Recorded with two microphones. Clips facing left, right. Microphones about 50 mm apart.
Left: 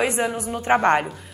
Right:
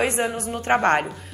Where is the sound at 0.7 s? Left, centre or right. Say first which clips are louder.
Left 1 dB; centre.